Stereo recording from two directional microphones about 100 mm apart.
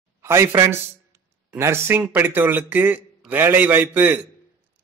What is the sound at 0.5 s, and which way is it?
A man's voice, 30° right (ahead or behind).